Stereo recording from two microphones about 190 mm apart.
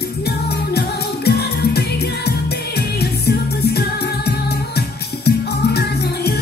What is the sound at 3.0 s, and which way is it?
Music, 55° left (ahead or behind).